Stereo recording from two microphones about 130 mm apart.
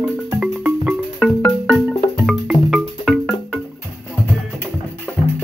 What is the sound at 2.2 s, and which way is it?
Music, centre (ahead or behind).